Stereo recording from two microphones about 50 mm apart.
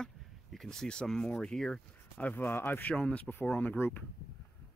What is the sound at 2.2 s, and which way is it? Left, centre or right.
Speech, left.